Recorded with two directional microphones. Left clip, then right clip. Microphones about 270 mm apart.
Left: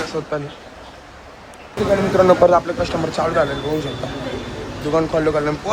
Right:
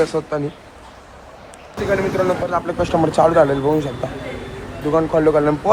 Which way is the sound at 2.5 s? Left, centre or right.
Centre.